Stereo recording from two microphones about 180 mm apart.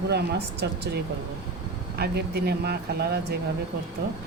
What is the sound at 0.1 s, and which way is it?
Speech, 65° right (ahead or behind).